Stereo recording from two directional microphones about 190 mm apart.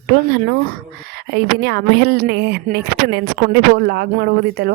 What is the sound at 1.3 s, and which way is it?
Speech, 60° right (ahead or behind).